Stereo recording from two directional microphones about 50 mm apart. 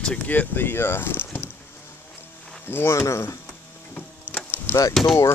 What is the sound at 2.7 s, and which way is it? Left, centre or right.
Speech, left.